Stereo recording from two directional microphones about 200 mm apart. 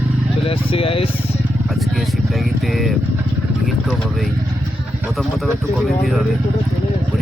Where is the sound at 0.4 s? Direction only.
30° left (ahead or behind).